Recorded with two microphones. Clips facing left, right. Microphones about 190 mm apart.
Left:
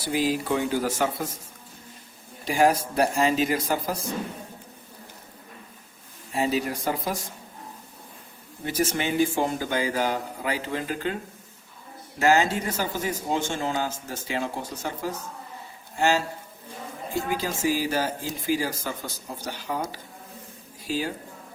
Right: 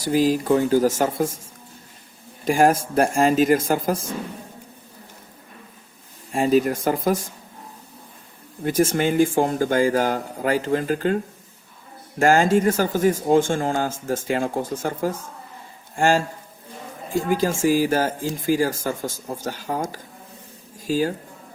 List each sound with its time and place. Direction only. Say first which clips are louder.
0.0 s speech: right 6 dB; 45° right (ahead or behind)
2.4 s speech: right 4 dB; 50° right (ahead or behind)
6.3 s speech: right 7 dB; 50° right (ahead or behind)
8.6 s speech: right 7 dB; 50° right (ahead or behind)
12.2 s speech: right 5 dB; 50° right (ahead or behind)
17.2 s speech: right 7 dB; 45° right (ahead or behind)